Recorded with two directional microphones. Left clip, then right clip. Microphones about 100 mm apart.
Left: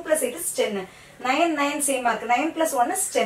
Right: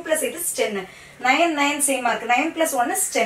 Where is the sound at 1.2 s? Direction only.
Centre (ahead or behind).